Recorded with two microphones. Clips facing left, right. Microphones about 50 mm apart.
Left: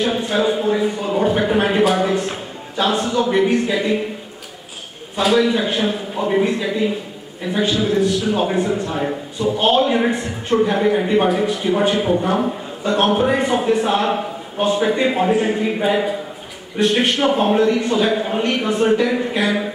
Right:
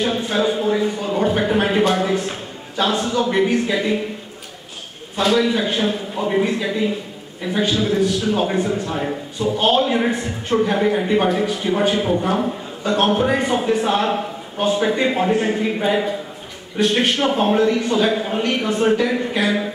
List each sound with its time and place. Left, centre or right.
0.0 s a sound: centre
2.8 s a man's voice: centre
5.1 s a man's voice: centre